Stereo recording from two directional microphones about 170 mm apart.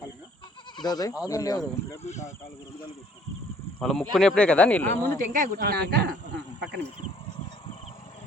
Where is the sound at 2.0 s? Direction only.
45° left (ahead or behind).